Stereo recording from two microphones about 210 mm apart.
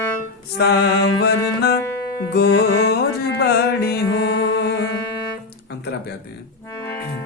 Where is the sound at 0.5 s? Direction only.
50° left (ahead or behind).